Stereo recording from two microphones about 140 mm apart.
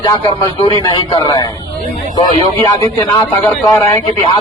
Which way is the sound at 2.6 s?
25° left (ahead or behind).